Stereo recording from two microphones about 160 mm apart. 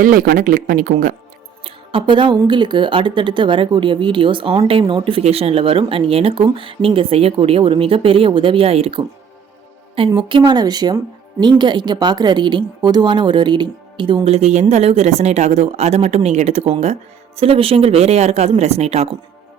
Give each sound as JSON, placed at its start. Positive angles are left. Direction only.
{"t": 0.0, "sound": "speech", "side_deg": -60}
{"t": 1.6, "sound": "speech", "side_deg": -35}
{"t": 10.2, "sound": "speech", "side_deg": -30}